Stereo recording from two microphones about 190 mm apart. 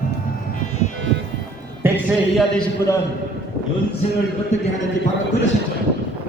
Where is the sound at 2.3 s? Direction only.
5° left (ahead or behind).